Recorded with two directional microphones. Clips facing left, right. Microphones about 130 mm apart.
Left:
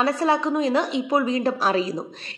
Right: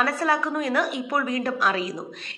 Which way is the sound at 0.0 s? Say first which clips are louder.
Left 3 dB; 25° left (ahead or behind).